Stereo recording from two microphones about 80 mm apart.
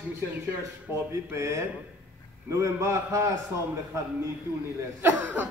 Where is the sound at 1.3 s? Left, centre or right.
Right.